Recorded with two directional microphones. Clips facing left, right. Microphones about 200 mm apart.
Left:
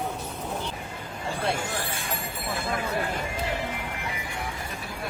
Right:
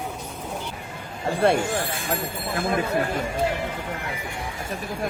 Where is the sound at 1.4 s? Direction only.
60° right (ahead or behind).